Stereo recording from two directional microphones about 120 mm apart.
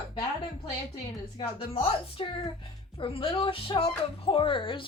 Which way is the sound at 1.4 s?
50° left (ahead or behind).